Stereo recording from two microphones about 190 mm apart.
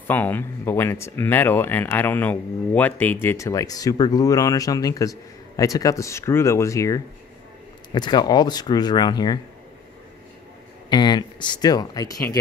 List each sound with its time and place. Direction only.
0.1 s speech: 10° left (ahead or behind)
10.9 s speech: 25° left (ahead or behind)